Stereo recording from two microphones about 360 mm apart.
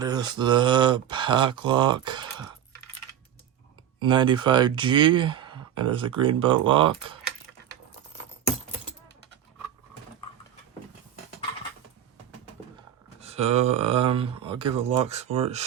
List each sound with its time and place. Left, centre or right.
0.0 s speech: centre
4.0 s speech: centre
13.1 s speech: centre